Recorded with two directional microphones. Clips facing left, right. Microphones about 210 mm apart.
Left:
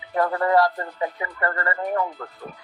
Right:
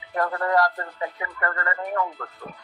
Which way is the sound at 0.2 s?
20° left (ahead or behind).